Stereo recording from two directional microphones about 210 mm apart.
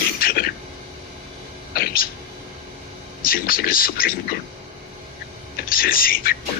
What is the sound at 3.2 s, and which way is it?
Speech, 45° left (ahead or behind).